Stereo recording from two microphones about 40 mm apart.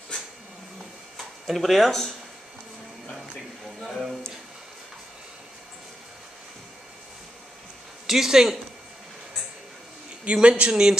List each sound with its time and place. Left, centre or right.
1.1 s a sound: centre
1.9 s speech: centre
3.8 s speech: centre
8.1 s speech: centre
10.2 s speech: right
10.7 s speech: centre